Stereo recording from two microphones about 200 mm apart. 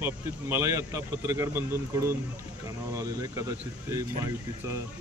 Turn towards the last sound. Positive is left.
turn(degrees=-15)  # may be behind; listen again after turning